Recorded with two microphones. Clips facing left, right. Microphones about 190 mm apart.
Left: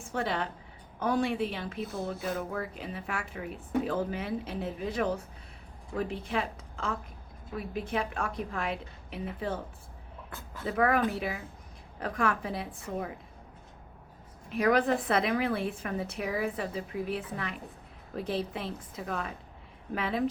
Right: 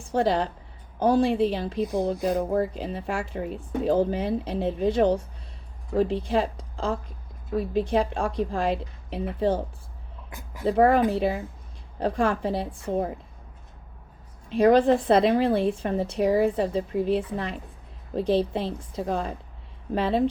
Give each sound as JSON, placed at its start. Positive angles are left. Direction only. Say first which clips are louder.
{"t": 0.0, "sound": "a woman's voice", "louder": "right 9 dB", "side_deg": -30}
{"t": 10.2, "sound": "a sound", "louder": "right 8 dB", "side_deg": -15}
{"t": 10.7, "sound": "speech", "louder": "right 7 dB", "side_deg": -30}
{"t": 14.5, "sound": "speech", "louder": "right 8 dB", "side_deg": -30}